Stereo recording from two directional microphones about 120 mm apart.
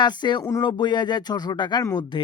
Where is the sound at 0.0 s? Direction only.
40° left (ahead or behind).